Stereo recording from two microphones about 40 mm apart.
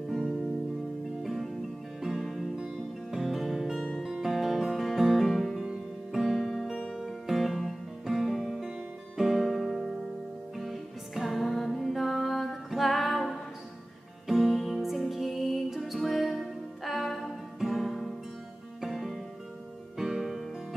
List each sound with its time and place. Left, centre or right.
1.2 s music: centre
2.5 s music: centre
3.2 s music: centre
8.5 s music: centre